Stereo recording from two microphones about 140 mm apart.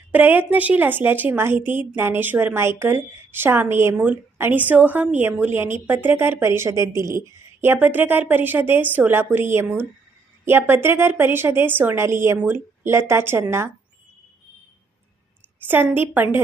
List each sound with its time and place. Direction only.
0.1 s a woman's voice: 15° right (ahead or behind)
15.6 s a woman's voice: 15° right (ahead or behind)